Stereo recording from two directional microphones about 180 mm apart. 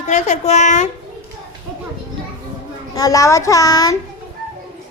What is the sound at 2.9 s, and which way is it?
A child's voice, 20° left (ahead or behind).